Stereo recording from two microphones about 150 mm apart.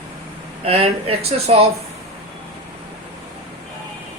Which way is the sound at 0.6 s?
40° right (ahead or behind).